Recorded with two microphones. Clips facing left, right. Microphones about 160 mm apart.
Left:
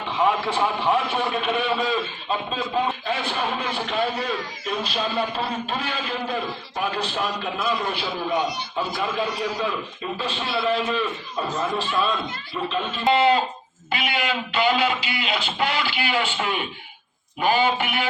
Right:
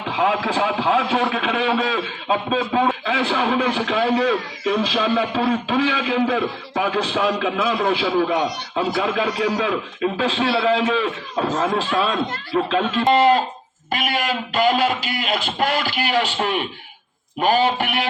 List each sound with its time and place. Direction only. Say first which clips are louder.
0.1 s a man's voice: right 2 dB; 90° right
13.1 s a man's voice: right 2 dB; 45° right (ahead or behind)